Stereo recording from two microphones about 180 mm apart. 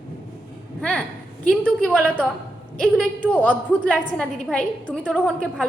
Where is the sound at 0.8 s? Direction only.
5° left (ahead or behind).